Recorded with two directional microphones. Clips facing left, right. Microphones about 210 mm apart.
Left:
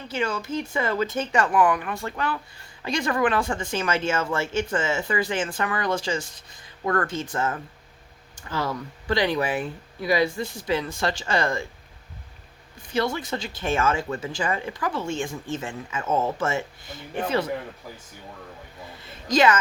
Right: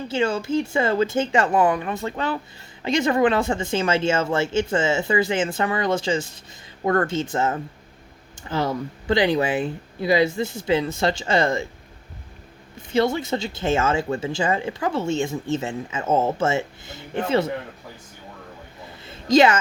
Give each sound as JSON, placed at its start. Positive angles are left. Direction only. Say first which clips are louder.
{"t": 0.1, "sound": "speech", "louder": "right 5 dB", "side_deg": -25}
{"t": 12.9, "sound": "speech", "louder": "right 5 dB", "side_deg": -25}
{"t": 19.0, "sound": "a sound", "louder": "right 4 dB", "side_deg": -25}